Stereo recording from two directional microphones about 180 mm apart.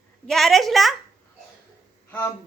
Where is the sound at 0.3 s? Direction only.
Centre (ahead or behind).